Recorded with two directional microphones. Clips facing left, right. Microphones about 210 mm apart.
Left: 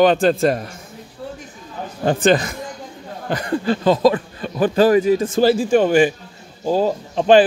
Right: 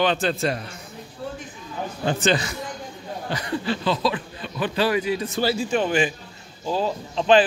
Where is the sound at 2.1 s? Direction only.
50° left (ahead or behind).